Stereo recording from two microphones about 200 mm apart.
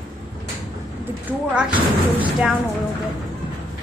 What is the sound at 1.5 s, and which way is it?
A woman's voice, 5° right (ahead or behind).